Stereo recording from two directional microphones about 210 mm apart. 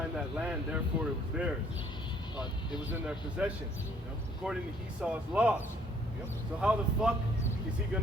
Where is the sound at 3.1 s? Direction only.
5° right (ahead or behind).